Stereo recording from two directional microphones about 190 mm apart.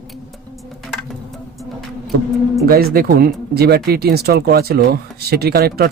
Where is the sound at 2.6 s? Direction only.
55° right (ahead or behind).